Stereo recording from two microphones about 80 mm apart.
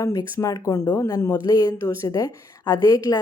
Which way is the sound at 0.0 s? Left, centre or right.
Left.